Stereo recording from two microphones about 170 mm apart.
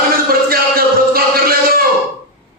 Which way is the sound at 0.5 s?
60° right (ahead or behind).